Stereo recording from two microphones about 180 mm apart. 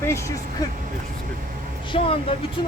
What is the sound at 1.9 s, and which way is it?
Speech, 30° left (ahead or behind).